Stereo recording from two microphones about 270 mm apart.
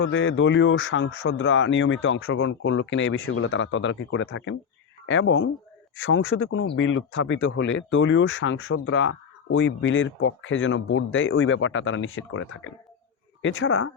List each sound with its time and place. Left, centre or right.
0.0 s speech: left